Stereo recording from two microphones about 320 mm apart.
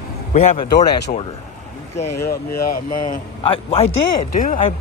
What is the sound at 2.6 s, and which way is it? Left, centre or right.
A man's voice, left.